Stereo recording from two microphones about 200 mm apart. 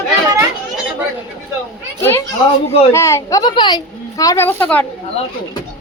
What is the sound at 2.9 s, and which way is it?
A woman's voice, 15° left (ahead or behind).